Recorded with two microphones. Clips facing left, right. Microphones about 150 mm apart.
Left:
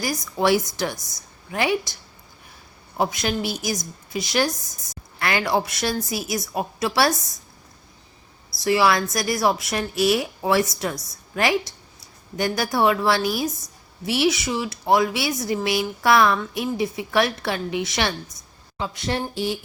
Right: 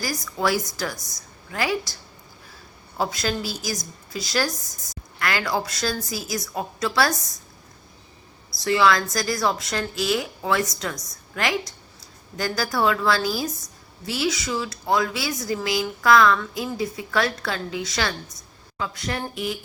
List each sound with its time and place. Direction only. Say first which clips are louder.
0.0 s speech: left 3 dB; 20° left (ahead or behind)
0.9 s a woman's voice: right 1 dB; centre (ahead or behind)
1.5 s speech: left 3 dB; 25° left (ahead or behind)
3.0 s speech: left 2 dB; 20° left (ahead or behind)
8.6 s speech: left 1 dB; 25° left (ahead or behind)